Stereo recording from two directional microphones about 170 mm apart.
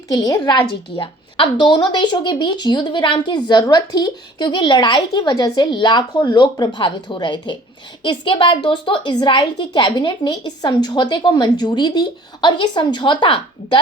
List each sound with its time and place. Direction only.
0.1 s a woman's voice: 20° left (ahead or behind)